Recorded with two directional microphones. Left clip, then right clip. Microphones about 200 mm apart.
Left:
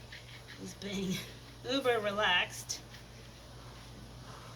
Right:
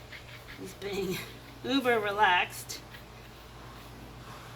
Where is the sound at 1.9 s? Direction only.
30° right (ahead or behind).